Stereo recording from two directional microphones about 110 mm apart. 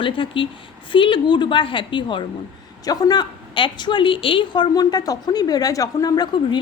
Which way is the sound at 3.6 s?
45° left (ahead or behind).